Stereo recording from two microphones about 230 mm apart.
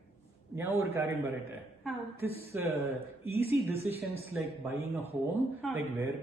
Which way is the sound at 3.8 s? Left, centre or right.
Right.